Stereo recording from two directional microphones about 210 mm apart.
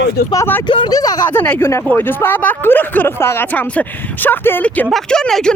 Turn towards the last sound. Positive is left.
turn(degrees=5)  # may be behind; listen again after turning